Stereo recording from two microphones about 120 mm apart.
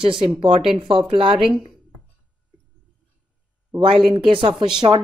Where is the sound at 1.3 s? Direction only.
5° right (ahead or behind).